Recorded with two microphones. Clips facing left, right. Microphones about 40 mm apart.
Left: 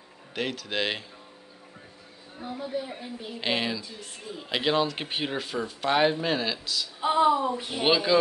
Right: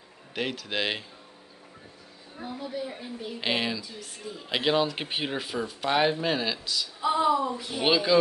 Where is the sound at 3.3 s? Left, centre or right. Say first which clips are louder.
Even; centre.